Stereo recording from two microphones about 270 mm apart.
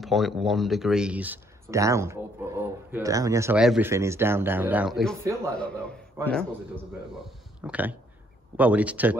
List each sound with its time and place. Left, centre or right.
0.0 s speech: centre
7.6 s speech: centre